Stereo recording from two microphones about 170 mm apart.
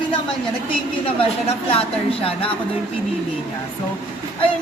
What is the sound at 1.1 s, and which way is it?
Speech, 35° left (ahead or behind).